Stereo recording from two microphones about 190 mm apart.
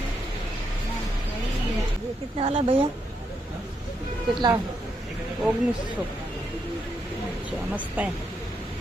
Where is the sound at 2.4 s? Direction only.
30° right (ahead or behind).